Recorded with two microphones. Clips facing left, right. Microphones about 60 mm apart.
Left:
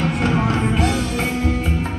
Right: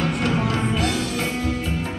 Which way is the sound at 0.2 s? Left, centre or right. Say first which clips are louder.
Left 3 dB; left.